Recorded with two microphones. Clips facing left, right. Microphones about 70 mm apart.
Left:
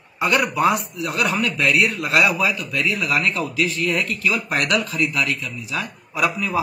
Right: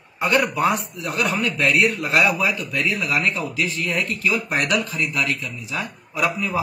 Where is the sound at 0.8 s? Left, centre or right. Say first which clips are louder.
Left 1 dB; right.